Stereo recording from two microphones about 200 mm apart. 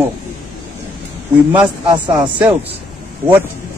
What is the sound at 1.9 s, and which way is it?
Speech, 20° right (ahead or behind).